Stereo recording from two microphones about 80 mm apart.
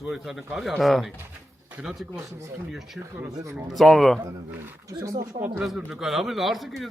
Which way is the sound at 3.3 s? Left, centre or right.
Right.